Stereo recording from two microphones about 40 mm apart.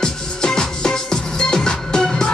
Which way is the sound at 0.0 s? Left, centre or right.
Centre.